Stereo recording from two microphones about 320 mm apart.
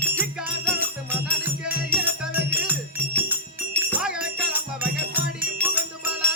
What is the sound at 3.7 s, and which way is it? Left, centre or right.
Music, centre.